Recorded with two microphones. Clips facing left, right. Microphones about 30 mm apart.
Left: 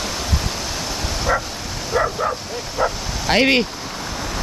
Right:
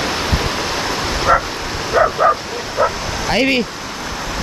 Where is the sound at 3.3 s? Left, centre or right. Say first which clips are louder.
Even; centre.